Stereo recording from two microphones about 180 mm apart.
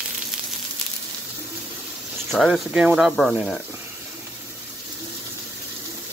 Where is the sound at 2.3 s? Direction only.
Centre (ahead or behind).